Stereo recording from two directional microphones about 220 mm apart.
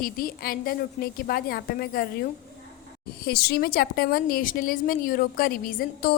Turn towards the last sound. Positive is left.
turn(degrees=40)  # may be behind; listen again after turning